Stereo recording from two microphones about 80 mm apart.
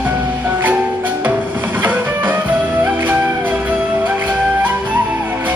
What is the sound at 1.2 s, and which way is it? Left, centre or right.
Music, right.